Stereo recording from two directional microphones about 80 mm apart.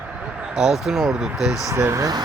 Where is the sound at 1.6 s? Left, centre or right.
Right.